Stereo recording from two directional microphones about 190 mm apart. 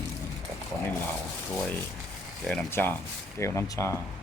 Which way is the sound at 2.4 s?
10° left (ahead or behind).